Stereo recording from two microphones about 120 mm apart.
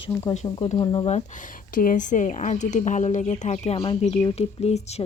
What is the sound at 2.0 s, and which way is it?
Speech, 90° left.